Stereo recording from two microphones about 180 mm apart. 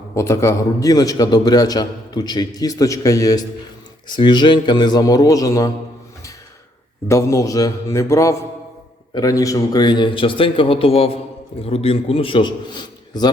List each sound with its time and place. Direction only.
0.1 s a man's voice: 15° left (ahead or behind)
7.1 s a man's voice: 15° left (ahead or behind)